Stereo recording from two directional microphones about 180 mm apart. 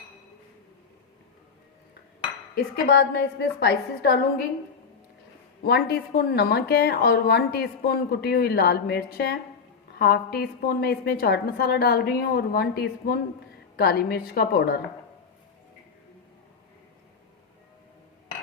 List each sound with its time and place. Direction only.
2.8 s a woman's voice: 65° left (ahead or behind)
5.6 s a woman's voice: 60° left (ahead or behind)